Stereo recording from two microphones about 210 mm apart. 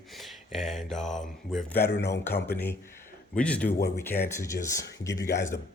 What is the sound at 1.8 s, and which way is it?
Speech, 55° left (ahead or behind).